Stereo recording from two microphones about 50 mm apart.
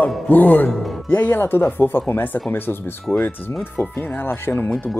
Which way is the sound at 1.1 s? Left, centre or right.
Left.